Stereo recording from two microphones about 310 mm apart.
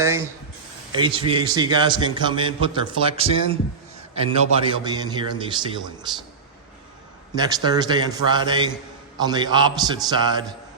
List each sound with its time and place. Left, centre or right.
0.0 s a sound: centre
0.9 s a man's voice: centre
7.3 s a man's voice: centre